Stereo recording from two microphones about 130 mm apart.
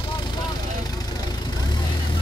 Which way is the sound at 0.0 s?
35° left (ahead or behind).